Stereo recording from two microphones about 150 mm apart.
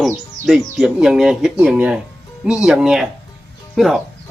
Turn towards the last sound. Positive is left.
turn(degrees=0)  # may be behind; listen again after turning